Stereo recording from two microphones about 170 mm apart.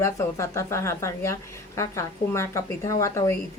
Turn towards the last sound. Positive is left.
turn(degrees=15)  # may be behind; listen again after turning